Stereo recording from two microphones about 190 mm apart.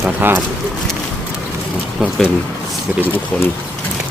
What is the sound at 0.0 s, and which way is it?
Speech, 10° right (ahead or behind).